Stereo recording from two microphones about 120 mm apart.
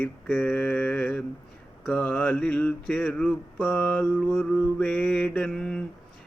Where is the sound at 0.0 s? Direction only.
15° left (ahead or behind).